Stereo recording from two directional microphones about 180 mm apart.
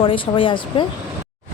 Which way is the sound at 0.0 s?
30° left (ahead or behind).